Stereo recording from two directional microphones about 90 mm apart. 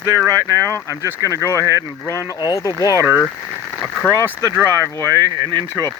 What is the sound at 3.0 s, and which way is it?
Speech, 20° right (ahead or behind).